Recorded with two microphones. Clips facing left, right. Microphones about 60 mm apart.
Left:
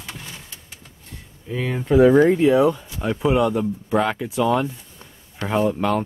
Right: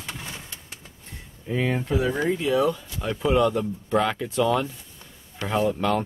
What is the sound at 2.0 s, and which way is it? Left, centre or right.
Speech, left.